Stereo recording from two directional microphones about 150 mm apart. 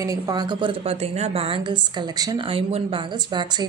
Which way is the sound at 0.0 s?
25° right (ahead or behind).